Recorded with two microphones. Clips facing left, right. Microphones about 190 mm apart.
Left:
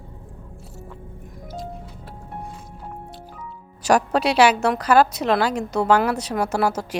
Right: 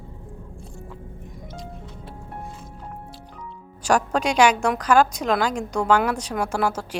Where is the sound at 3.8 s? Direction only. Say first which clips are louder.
Left 2 dB; 10° left (ahead or behind).